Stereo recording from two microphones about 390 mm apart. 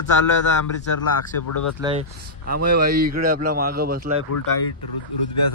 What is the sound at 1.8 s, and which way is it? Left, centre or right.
A man's voice, centre.